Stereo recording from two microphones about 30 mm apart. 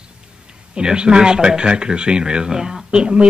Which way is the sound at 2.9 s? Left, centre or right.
Right.